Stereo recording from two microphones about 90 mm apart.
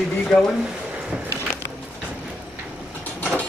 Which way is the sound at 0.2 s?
5° left (ahead or behind).